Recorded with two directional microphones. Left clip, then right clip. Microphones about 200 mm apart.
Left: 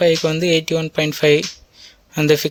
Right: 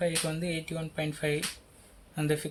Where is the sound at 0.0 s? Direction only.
50° left (ahead or behind).